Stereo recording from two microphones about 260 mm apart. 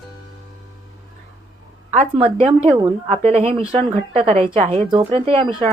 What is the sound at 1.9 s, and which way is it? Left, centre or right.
Speech, right.